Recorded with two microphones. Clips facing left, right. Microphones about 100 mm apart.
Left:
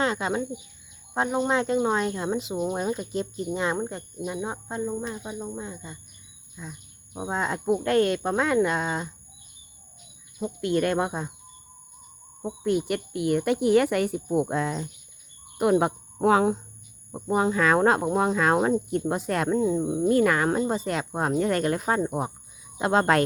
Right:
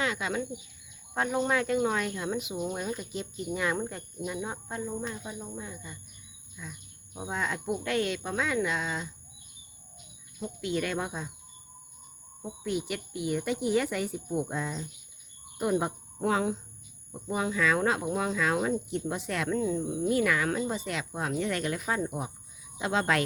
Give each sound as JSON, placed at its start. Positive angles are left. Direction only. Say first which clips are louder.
{"t": 0.0, "sound": "speech", "louder": "left 5 dB", "side_deg": 35}
{"t": 1.1, "sound": "speech", "louder": "left 4 dB", "side_deg": 25}
{"t": 10.4, "sound": "speech", "louder": "left 7 dB", "side_deg": 55}
{"t": 12.5, "sound": "speech", "louder": "left 7 dB", "side_deg": 55}
{"t": 17.1, "sound": "speech", "louder": "left 7 dB", "side_deg": 45}
{"t": 19.5, "sound": "speech", "louder": "left 5 dB", "side_deg": 25}
{"t": 20.1, "sound": "speech", "louder": "left 6 dB", "side_deg": 45}